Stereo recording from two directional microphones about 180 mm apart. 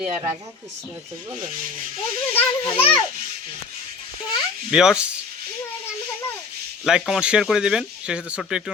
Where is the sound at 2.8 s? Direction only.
10° left (ahead or behind).